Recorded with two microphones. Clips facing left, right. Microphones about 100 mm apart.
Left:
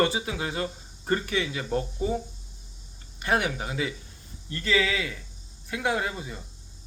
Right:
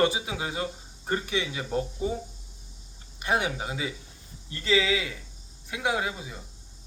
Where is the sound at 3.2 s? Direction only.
15° right (ahead or behind).